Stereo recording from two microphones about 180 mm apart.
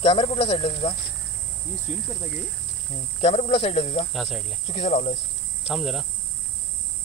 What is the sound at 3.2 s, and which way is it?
Speech, 35° left (ahead or behind).